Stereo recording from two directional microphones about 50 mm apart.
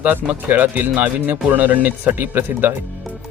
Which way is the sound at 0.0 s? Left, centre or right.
Right.